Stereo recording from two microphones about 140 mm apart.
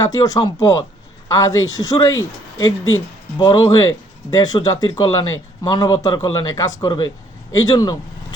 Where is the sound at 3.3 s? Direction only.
25° left (ahead or behind).